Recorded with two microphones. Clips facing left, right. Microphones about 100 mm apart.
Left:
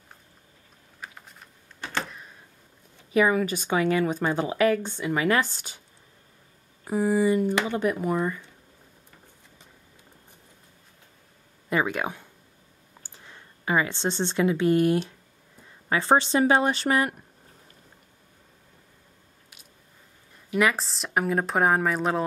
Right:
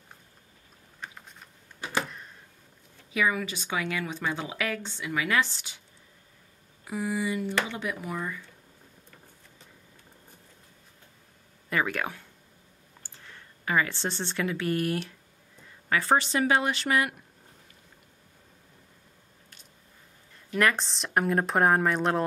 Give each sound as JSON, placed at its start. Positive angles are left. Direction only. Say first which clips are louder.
{"t": 1.0, "sound": "computer keyboard", "louder": "even", "side_deg": 5}
{"t": 1.8, "sound": "a sound", "louder": "right 1 dB", "side_deg": -10}
{"t": 3.1, "sound": "a woman's voice", "louder": "left 6 dB", "side_deg": 40}
{"t": 6.8, "sound": "a woman's voice", "louder": "left 8 dB", "side_deg": 40}
{"t": 11.7, "sound": "a woman's voice", "louder": "left 3 dB", "side_deg": 20}
{"t": 20.4, "sound": "a woman's voice", "louder": "left 2 dB", "side_deg": 5}